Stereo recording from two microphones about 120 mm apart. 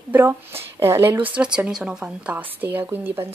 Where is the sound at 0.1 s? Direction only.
20° right (ahead or behind).